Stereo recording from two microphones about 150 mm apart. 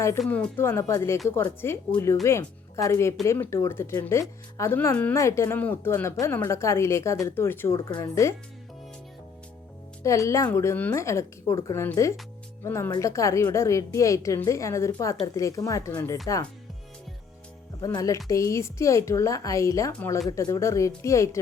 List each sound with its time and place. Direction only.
0.3 s a woman's voice: 10° left (ahead or behind)
10.0 s a woman's voice: 20° left (ahead or behind)
17.7 s a woman's voice: 25° left (ahead or behind)